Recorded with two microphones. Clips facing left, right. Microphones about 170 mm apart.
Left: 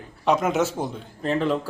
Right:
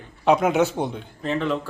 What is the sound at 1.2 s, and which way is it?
Speech, 35° left (ahead or behind).